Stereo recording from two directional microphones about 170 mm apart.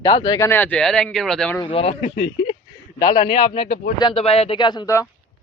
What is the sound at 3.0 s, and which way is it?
A man's voice, 25° left (ahead or behind).